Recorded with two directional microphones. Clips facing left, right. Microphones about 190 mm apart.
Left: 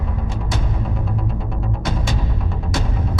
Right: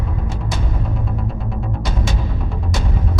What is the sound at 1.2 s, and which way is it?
Music, centre (ahead or behind).